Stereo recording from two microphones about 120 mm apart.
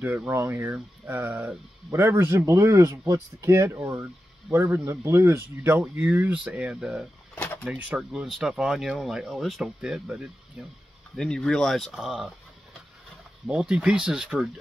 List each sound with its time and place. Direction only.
0.0 s speech: 15° right (ahead or behind)
7.3 s a sound: 15° left (ahead or behind)
7.6 s speech: 10° right (ahead or behind)
11.1 s speech: 5° left (ahead or behind)
13.5 s speech: 10° right (ahead or behind)